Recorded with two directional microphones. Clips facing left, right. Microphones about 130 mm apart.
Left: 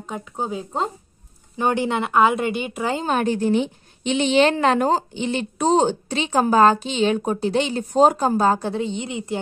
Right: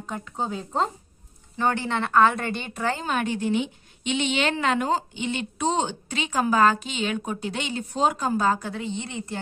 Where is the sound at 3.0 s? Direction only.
35° left (ahead or behind).